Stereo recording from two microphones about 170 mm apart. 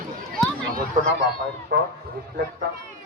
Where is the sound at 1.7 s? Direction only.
75° right (ahead or behind).